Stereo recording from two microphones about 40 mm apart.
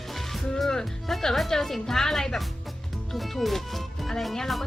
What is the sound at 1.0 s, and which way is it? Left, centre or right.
A woman's voice, centre.